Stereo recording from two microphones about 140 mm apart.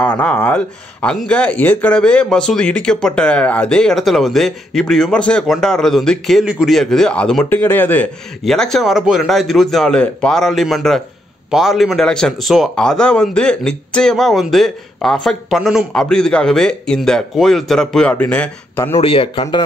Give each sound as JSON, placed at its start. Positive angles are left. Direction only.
{"t": 0.0, "sound": "speech", "side_deg": 10}
{"t": 18.9, "sound": "a man's voice", "side_deg": 40}